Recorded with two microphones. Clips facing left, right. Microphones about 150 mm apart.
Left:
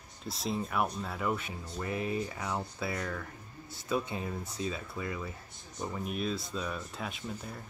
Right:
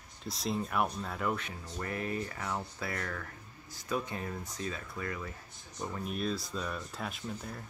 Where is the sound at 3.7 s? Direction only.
25° left (ahead or behind).